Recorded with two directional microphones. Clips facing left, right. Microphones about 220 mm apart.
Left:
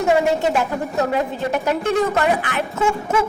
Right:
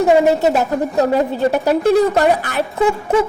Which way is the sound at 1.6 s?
35° right (ahead or behind).